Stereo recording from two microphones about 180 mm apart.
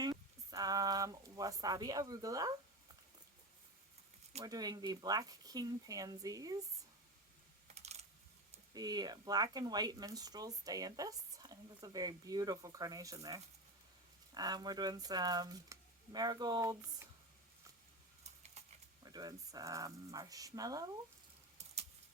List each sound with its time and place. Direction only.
0.0 s a sound: 20° right (ahead or behind)
4.4 s speech: 20° right (ahead or behind)
7.7 s computer keyboard: 35° right (ahead or behind)
8.7 s speech: 20° right (ahead or behind)
18.2 s a sound: 40° right (ahead or behind)
19.0 s speech: 20° right (ahead or behind)